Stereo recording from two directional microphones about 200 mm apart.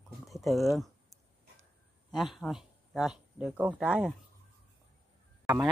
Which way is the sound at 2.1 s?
Centre (ahead or behind).